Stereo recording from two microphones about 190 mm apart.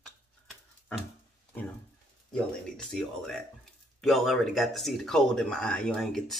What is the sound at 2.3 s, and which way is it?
Speech, 5° left (ahead or behind).